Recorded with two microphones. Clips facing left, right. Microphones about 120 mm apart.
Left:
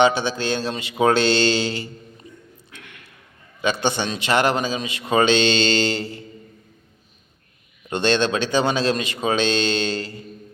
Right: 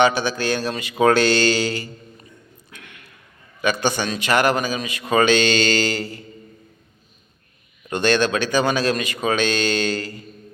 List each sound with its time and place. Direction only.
0.0 s a man's voice: 25° left (ahead or behind)
3.6 s a man's voice: 25° left (ahead or behind)
7.9 s a man's voice: 25° left (ahead or behind)